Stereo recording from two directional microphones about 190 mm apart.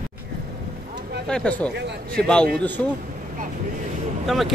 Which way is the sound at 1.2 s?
5° left (ahead or behind).